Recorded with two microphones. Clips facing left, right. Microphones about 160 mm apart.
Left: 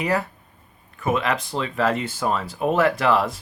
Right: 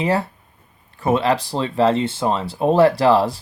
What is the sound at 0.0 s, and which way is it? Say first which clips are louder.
Speech: right 3 dB; 30° right (ahead or behind).